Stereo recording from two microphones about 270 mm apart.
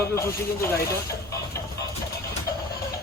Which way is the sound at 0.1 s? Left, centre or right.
Centre.